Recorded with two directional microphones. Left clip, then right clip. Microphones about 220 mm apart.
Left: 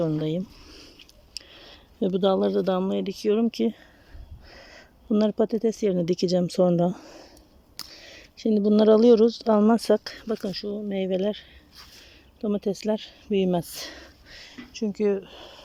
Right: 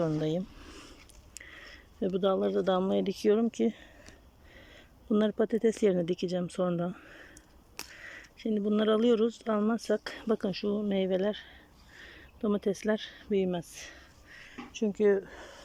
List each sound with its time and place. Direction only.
0.0 s speech: 10° left (ahead or behind)
1.5 s speech: 15° left (ahead or behind)
10.0 s speech: centre (ahead or behind)
13.5 s a sound: 20° left (ahead or behind)
14.8 s speech: centre (ahead or behind)